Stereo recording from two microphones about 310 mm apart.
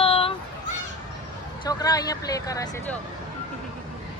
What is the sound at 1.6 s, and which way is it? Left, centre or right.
Speech, centre.